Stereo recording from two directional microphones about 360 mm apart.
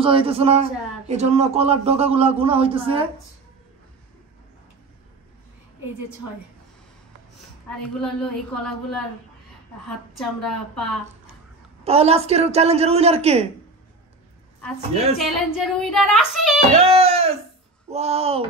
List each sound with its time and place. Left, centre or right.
0.0 s speech: centre
8.0 s child singing: centre
10.8 s speech: centre
11.8 s speech: centre
15.1 s child singing: centre
16.7 s speech: centre